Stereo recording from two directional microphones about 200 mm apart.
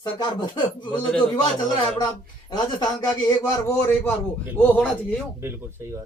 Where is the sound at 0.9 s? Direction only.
5° left (ahead or behind).